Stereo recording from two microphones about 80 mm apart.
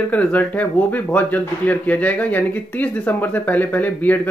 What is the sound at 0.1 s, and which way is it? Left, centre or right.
Speech, centre.